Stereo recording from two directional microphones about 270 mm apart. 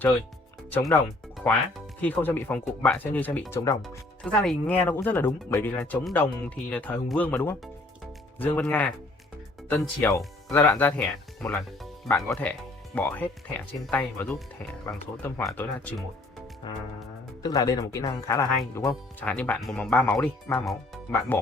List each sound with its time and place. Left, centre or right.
0.7 s speech: centre
2.0 s speech: centre
16.6 s speech: centre